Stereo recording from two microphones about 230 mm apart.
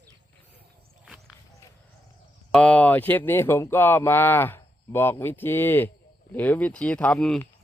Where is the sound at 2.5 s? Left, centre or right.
Centre.